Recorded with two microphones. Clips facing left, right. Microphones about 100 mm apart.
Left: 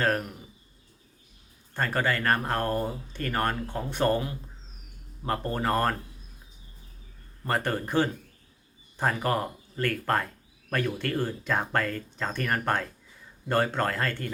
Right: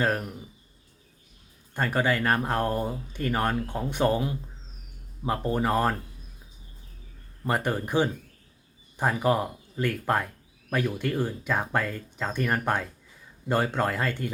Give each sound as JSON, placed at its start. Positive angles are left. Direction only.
{"t": 1.7, "sound": "speech", "side_deg": -15}
{"t": 7.4, "sound": "speech", "side_deg": -10}